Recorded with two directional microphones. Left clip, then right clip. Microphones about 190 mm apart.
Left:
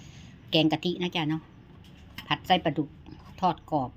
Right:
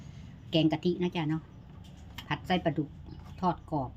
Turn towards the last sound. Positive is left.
turn(degrees=20)  # may be behind; listen again after turning